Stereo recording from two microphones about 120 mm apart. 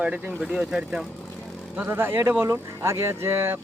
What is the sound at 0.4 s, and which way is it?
Speech, 5° right (ahead or behind).